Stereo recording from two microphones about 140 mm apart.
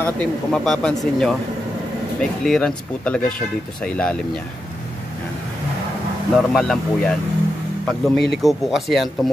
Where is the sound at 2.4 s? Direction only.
5° left (ahead or behind).